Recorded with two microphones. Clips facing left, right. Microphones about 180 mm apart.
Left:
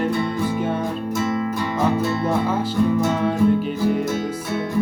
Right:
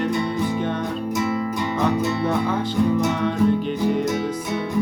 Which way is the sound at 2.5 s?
10° left (ahead or behind).